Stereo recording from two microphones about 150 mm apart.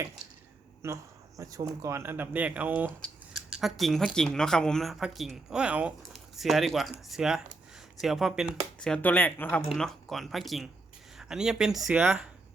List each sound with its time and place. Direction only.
0.8 s speech: 20° right (ahead or behind)
3.5 s a woman's voice: centre (ahead or behind)